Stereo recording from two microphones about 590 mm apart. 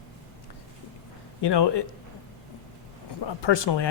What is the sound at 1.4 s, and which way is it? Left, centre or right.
Speech, left.